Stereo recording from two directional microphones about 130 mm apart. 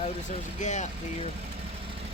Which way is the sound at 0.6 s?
65° left (ahead or behind).